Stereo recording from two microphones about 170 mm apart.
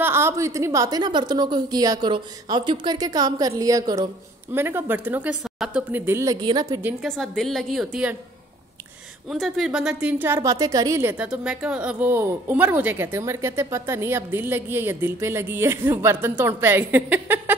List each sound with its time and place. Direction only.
0.0 s a woman's voice: 15° right (ahead or behind)
6.4 s a woman's voice: 25° right (ahead or behind)
6.8 s a woman's voice: 10° right (ahead or behind)
7.1 s a woman's voice: centre (ahead or behind)
9.3 s a woman's voice: centre (ahead or behind)